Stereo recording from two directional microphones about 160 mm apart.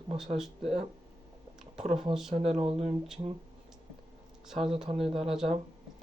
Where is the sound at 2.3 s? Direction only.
40° right (ahead or behind).